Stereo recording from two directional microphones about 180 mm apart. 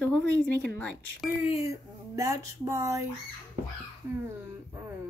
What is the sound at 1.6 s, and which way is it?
Speech, 20° right (ahead or behind).